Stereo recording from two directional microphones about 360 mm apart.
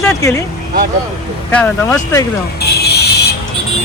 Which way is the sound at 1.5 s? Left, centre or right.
Centre.